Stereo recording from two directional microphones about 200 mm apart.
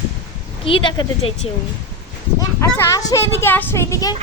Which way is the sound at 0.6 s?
25° left (ahead or behind).